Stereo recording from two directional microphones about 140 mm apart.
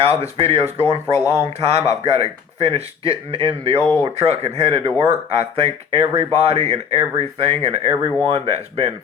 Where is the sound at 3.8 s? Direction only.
20° left (ahead or behind).